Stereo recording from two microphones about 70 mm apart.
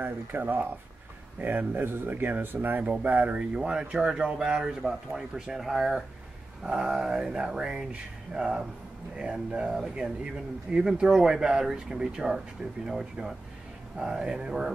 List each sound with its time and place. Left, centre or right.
0.0 s speech: right; by 14.7 s centre